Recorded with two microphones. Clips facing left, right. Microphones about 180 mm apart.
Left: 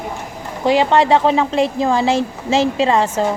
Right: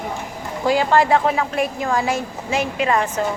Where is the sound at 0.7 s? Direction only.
25° left (ahead or behind).